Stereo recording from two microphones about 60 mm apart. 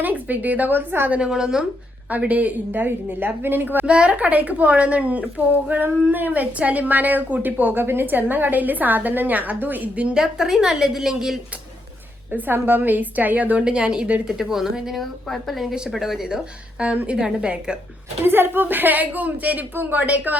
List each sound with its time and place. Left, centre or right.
0.0 s speech: right
1.2 s a woman's voice: centre
2.0 s speech: right
3.8 s speech: centre
10.2 s a woman's voice: centre
12.3 s speech: right
13.7 s a woman's voice: centre
15.7 s a woman's voice: centre
16.8 s a woman's voice: right
18.3 s speech: right